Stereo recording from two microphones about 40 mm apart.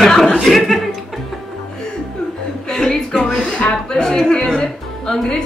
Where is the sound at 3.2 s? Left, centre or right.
Centre.